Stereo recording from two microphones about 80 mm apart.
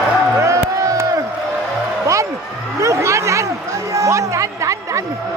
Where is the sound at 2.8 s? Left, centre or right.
Right.